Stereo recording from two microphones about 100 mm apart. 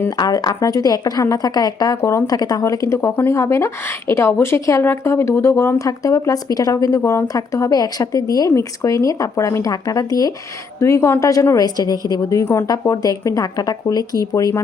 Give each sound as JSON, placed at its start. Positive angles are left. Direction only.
{"t": 0.2, "sound": "a woman's voice", "side_deg": 40}
{"t": 11.5, "sound": "a woman's voice", "side_deg": 40}